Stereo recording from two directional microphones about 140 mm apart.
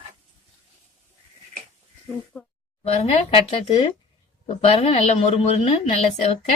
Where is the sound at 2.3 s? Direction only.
10° left (ahead or behind).